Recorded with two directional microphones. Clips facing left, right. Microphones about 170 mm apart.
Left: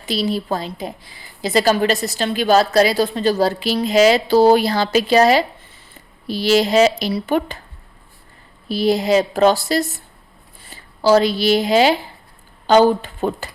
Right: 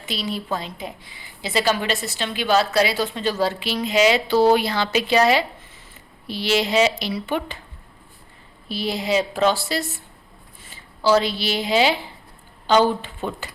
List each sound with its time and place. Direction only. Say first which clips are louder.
0.0 s a woman's voice: left 7 dB; 35° left (ahead or behind)
8.7 s a woman's voice: left 7 dB; 40° left (ahead or behind)